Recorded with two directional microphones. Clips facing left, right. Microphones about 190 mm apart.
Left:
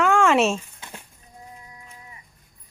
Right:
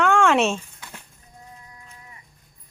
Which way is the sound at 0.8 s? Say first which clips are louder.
Left 2 dB; 20° left (ahead or behind).